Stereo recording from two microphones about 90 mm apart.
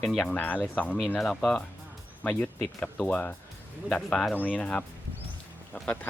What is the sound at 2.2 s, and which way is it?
Speech, 20° left (ahead or behind).